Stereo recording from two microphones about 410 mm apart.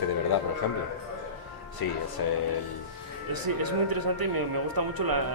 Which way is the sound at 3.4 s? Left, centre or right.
Right.